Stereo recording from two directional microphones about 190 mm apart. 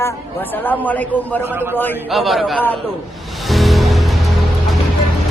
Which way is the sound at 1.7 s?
10° left (ahead or behind).